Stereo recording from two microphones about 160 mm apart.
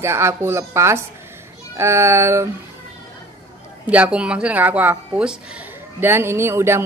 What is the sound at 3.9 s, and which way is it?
Speech, 10° right (ahead or behind).